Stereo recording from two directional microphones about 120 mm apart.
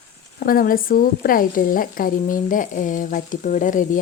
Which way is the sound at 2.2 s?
90° left.